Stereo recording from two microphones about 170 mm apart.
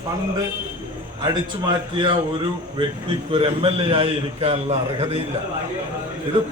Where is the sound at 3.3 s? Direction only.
35° right (ahead or behind).